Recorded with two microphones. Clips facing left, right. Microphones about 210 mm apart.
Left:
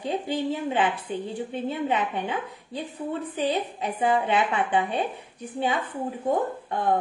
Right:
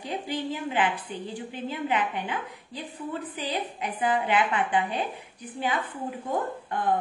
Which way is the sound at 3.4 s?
25° left (ahead or behind).